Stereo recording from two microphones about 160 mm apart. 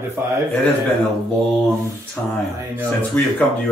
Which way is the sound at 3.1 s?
10° left (ahead or behind).